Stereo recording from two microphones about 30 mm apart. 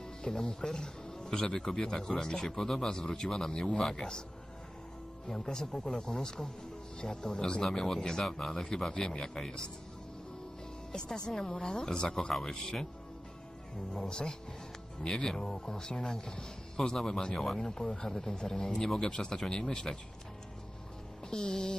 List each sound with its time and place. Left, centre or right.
0.2 s speech: left
5.3 s speech: centre
8.9 s speech: left
10.9 s speech: left
13.9 s speech: left
21.2 s speech: left